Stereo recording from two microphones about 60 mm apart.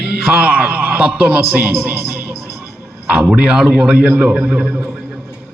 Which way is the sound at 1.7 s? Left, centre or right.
Right.